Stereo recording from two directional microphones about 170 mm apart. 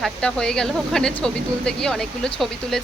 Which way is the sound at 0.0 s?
5° left (ahead or behind).